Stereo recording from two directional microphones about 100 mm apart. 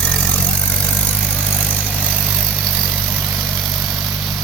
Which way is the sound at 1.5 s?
15° left (ahead or behind).